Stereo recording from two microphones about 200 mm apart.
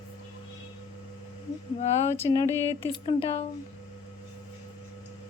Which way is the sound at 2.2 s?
25° left (ahead or behind).